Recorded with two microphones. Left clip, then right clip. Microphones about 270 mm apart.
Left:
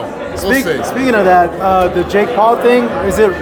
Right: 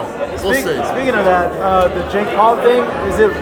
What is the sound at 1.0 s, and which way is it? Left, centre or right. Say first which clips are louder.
A man's voice: left 5 dB; left.